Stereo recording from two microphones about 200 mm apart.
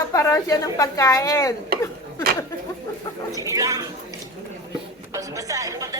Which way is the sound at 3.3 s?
15° right (ahead or behind).